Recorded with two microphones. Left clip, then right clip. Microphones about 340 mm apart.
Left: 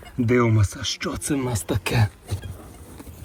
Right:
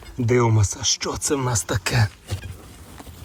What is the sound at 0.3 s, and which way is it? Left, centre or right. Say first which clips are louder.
Speech: right 1 dB; centre.